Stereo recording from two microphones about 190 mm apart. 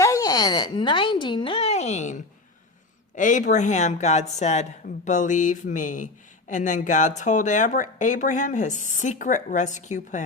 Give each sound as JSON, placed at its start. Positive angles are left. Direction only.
{"t": 0.0, "sound": "speech", "side_deg": 20}